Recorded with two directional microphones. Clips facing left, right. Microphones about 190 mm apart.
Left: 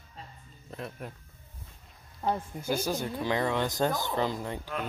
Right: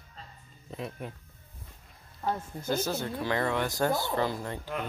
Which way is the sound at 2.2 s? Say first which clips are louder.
Left 1 dB; 10° left (ahead or behind).